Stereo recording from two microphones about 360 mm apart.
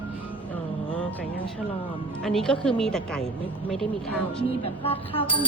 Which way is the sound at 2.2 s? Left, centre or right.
Centre.